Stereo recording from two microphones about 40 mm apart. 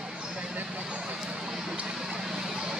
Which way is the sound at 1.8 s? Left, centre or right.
Centre.